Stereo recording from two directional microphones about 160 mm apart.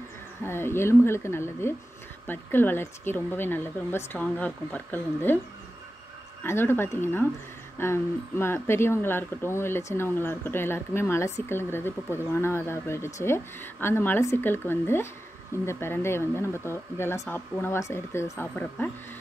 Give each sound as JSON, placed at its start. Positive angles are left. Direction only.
{"t": 0.4, "sound": "speech", "side_deg": 15}
{"t": 6.4, "sound": "speech", "side_deg": 15}